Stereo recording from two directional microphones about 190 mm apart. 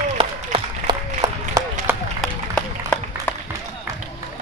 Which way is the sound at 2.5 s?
5° left (ahead or behind).